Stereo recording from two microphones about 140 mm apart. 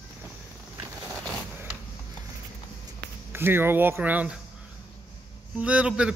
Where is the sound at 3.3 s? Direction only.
15° right (ahead or behind).